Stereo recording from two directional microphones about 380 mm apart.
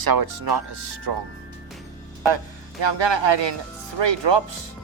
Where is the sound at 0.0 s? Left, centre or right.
Right.